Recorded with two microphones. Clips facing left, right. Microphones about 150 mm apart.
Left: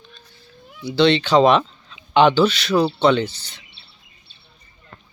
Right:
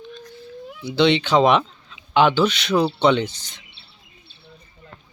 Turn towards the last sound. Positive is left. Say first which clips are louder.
# left 1 dB
turn(degrees=-15)  # may be behind; listen again after turning